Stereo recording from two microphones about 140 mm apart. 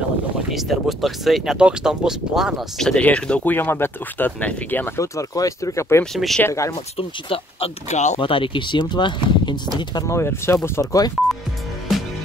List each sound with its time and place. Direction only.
0.5 s speech: centre (ahead or behind); by 6.0 s 20° left (ahead or behind)
6.1 s speech: centre (ahead or behind)
6.4 s speech: 20° left (ahead or behind)
7.0 s speech: 40° left (ahead or behind)
8.2 s speech: 40° left (ahead or behind)